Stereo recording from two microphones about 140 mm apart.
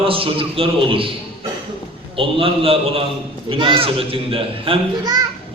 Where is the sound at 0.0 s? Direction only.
40° right (ahead or behind).